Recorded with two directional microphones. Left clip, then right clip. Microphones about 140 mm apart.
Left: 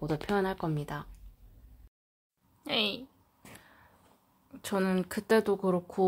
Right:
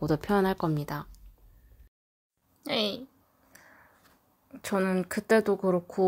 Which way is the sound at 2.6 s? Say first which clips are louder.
Right 1 dB; 25° right (ahead or behind).